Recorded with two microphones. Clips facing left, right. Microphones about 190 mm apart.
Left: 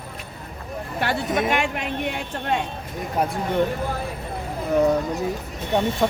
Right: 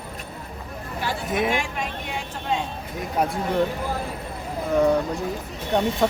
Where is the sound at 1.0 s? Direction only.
70° left (ahead or behind).